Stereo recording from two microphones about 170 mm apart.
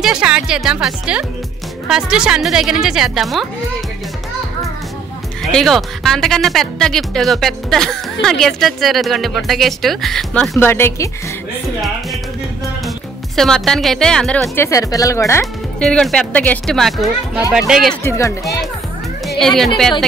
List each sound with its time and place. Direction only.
0.0 s speech: 5° right (ahead or behind)
5.4 s speech: centre (ahead or behind)
13.4 s speech: centre (ahead or behind)
14.5 s speech: 15° left (ahead or behind)
15.8 s speech: 5° left (ahead or behind)
18.0 s speech: 15° left (ahead or behind)
19.2 s speech: centre (ahead or behind)